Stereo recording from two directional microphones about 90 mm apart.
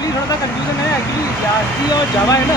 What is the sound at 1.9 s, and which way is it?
Speech, 40° left (ahead or behind).